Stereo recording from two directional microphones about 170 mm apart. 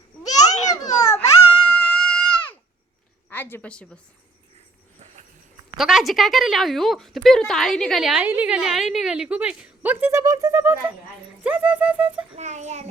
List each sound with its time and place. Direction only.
0.3 s babbling: 45° left (ahead or behind)
0.9 s baby cry: 20° left (ahead or behind)
1.6 s a sound: 5° left (ahead or behind)
3.2 s a woman's voice: 10° left (ahead or behind)
5.7 s a woman's voice: centre (ahead or behind)
12.4 s a child's voice: 45° right (ahead or behind)